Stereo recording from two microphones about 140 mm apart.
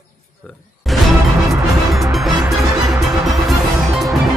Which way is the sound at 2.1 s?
Centre (ahead or behind).